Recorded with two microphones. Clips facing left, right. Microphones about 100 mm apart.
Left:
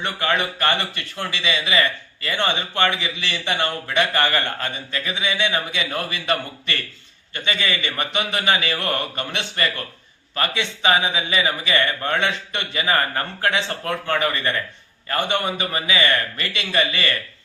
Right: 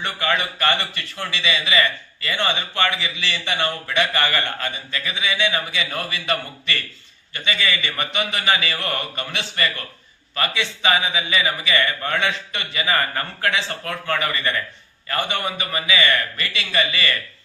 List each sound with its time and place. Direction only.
0.0 s a man's voice: 25° left (ahead or behind)